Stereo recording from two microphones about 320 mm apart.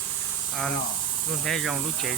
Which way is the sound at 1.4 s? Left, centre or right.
Centre.